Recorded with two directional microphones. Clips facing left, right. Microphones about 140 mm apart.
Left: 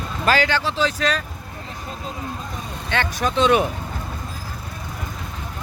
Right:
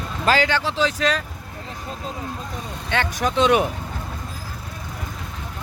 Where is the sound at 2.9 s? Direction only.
15° right (ahead or behind).